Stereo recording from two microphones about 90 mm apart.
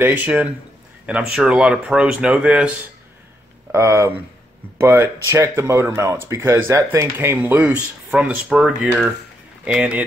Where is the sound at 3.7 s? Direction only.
30° right (ahead or behind).